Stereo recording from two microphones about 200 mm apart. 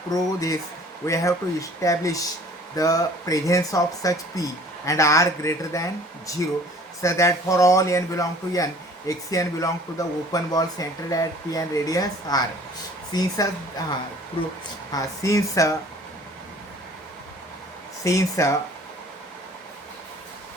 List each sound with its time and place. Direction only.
0.1 s speech: 15° left (ahead or behind)
14.9 s speech: 15° left (ahead or behind)
18.0 s speech: 15° left (ahead or behind)